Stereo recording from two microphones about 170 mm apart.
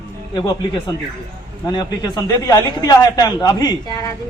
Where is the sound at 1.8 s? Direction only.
25° left (ahead or behind).